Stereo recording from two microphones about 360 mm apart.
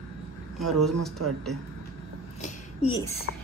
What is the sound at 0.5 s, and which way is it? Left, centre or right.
Speech, centre.